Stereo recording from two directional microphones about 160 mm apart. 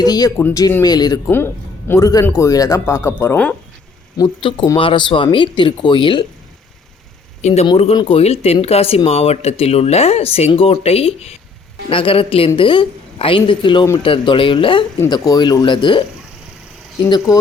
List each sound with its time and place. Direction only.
0.0 s speech: 25° left (ahead or behind)
4.2 s speech: 25° left (ahead or behind)
7.4 s speech: 45° left (ahead or behind)
7.9 s speech: 35° left (ahead or behind)